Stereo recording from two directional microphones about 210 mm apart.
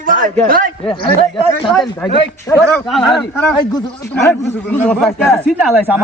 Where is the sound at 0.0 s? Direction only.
40° right (ahead or behind).